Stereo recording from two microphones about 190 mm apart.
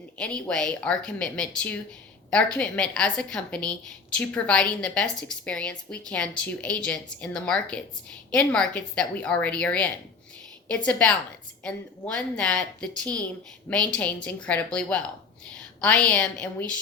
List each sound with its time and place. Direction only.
0.2 s a woman's voice: 5° left (ahead or behind)